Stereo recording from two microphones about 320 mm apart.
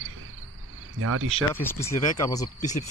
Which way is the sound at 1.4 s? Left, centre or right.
Centre.